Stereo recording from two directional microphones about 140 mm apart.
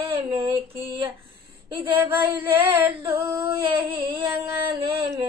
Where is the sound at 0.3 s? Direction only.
35° right (ahead or behind).